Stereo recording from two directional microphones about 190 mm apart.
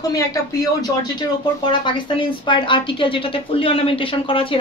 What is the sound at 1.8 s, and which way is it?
Speech, 25° left (ahead or behind).